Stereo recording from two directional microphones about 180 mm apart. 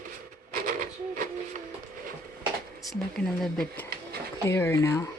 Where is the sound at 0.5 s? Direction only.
45° right (ahead or behind).